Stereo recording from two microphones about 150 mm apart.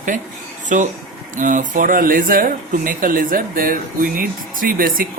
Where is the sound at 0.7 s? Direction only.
60° right (ahead or behind).